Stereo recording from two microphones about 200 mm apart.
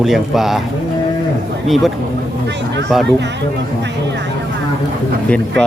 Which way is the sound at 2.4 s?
60° right (ahead or behind).